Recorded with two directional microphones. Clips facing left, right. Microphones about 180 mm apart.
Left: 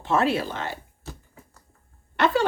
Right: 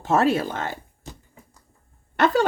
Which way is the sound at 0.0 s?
45° right (ahead or behind).